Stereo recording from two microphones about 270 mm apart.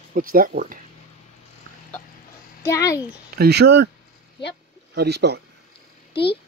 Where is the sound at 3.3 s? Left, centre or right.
Right.